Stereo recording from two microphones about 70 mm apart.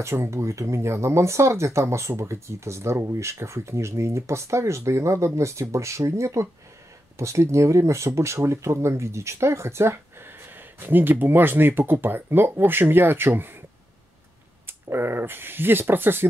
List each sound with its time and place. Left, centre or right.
0.0 s speech: right
14.7 s speech: right